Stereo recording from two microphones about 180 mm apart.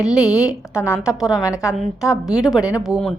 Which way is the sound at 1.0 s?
5° right (ahead or behind).